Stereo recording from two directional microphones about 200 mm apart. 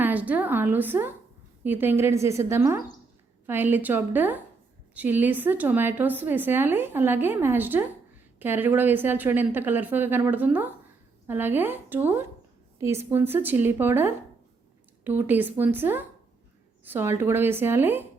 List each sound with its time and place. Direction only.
0.0 s a woman's voice: 10° right (ahead or behind)